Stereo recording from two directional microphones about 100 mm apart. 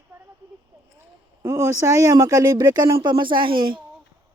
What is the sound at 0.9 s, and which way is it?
Speech, 30° right (ahead or behind).